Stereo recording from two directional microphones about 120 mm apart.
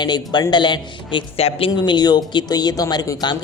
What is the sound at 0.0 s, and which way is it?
Speech, 40° left (ahead or behind).